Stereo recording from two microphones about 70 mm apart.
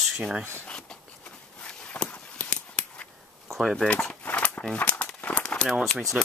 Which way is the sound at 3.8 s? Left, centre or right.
Centre.